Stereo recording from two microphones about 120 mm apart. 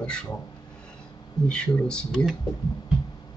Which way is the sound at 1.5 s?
5° left (ahead or behind).